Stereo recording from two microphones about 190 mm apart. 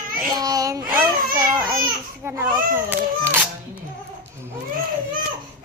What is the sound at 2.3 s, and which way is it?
A child's voice, 10° right (ahead or behind).